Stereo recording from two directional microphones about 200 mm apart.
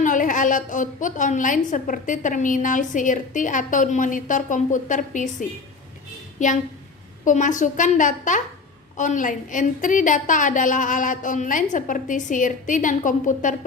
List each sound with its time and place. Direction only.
0.0 s a woman's voice: 40° left (ahead or behind)
7.3 s a woman's voice: 40° left (ahead or behind)